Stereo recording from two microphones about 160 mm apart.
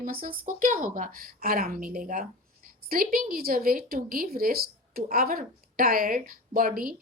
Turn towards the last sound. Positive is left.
turn(degrees=-65)  # may be behind; listen again after turning